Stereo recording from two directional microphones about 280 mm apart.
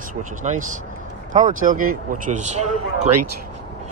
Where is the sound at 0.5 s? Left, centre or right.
Right.